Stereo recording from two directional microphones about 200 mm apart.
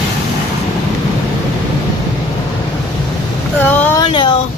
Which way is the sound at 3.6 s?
10° left (ahead or behind).